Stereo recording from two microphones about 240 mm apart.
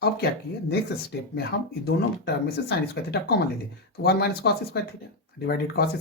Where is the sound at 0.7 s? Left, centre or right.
Left.